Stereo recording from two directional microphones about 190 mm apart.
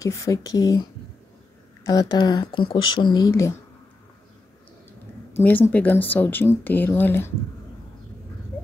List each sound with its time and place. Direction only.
0.0 s speech: 15° left (ahead or behind)
1.9 s speech: 20° left (ahead or behind)
5.3 s speech: 10° left (ahead or behind)